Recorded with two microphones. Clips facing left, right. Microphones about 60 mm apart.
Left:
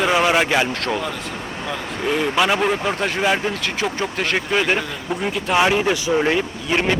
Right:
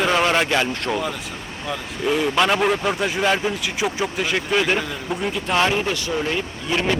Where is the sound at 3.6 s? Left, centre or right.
Centre.